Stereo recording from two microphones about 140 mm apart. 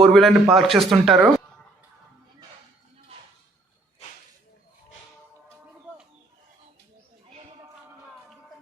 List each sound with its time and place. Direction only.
0.0 s speech: centre (ahead or behind)